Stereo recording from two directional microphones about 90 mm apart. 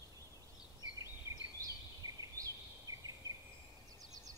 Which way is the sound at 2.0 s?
40° right (ahead or behind).